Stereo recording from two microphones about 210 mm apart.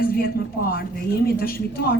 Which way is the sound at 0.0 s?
45° left (ahead or behind).